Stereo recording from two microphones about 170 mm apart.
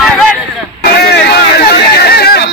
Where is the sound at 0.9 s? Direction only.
70° left (ahead or behind).